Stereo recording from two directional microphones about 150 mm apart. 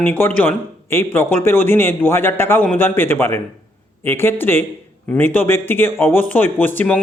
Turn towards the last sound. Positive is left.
turn(degrees=10)  # may be behind; listen again after turning